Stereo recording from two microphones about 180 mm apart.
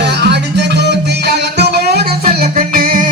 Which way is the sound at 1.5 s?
60° right (ahead or behind).